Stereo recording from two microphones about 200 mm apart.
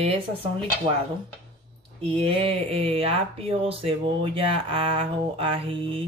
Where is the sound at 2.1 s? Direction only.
30° right (ahead or behind).